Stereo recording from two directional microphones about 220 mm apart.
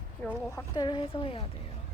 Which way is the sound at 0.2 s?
10° left (ahead or behind).